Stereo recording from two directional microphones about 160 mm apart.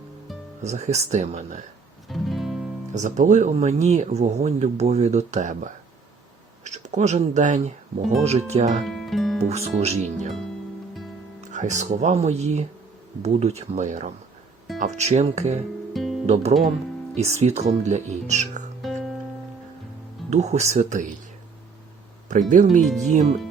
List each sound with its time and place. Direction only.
0.6 s speech: 45° right (ahead or behind)
2.0 s music: centre (ahead or behind)
2.9 s speech: 50° right (ahead or behind)
6.7 s speech: 45° right (ahead or behind)
8.8 s music: centre (ahead or behind)
9.4 s speech: 40° right (ahead or behind)
11.3 s speech: 45° right (ahead or behind)
15.9 s music: centre (ahead or behind)
16.2 s speech: 40° right (ahead or behind)
18.8 s music: centre (ahead or behind)
20.3 s speech: 45° right (ahead or behind)
22.3 s speech: 50° right (ahead or behind)